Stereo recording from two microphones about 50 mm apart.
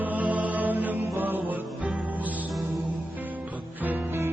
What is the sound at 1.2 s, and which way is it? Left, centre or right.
Music, right.